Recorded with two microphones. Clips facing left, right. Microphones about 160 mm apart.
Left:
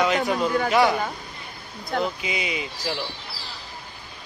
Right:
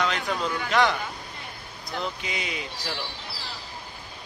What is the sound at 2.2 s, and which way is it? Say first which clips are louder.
Speech: left 4 dB; 5° left (ahead or behind).